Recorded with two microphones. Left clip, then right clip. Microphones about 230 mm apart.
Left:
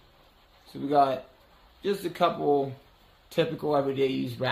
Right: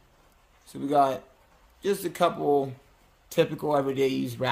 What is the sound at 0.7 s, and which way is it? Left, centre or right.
Speech, right.